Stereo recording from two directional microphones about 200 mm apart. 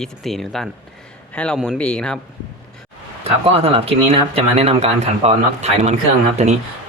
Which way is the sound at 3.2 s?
30° right (ahead or behind).